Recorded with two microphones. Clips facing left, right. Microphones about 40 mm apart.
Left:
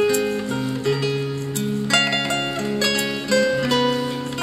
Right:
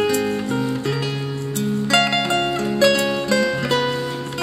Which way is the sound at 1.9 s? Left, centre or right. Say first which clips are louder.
Right 2 dB; right.